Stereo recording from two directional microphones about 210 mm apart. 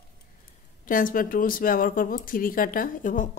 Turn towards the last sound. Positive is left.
turn(degrees=40)  # may be behind; listen again after turning